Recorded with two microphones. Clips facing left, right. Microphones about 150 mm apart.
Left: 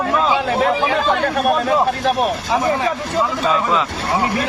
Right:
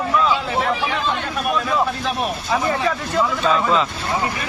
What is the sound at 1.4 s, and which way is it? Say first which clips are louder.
Speech: left 3 dB; 45° left (ahead or behind).